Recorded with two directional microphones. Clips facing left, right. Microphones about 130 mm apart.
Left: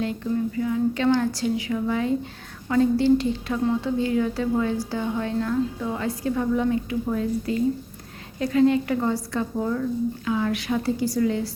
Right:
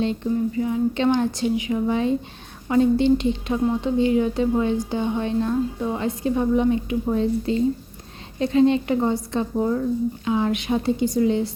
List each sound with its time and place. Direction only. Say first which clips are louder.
0.0 s a woman's voice: right 3 dB; 25° right (ahead or behind)